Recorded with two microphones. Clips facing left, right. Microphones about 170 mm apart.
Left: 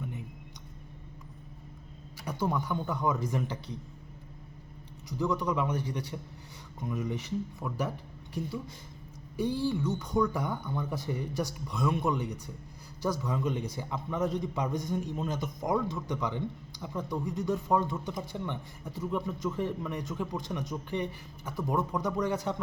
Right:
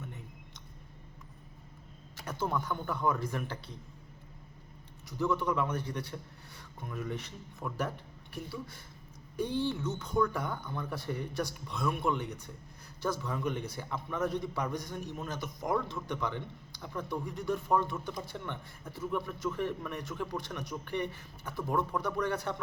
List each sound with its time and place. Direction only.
2.4 s a man's voice: 15° left (ahead or behind)
5.1 s a man's voice: 15° left (ahead or behind)
7.6 s speech: centre (ahead or behind)
8.3 s a man's voice: 20° left (ahead or behind)
9.3 s speech: 5° left (ahead or behind)
9.8 s a man's voice: 15° left (ahead or behind)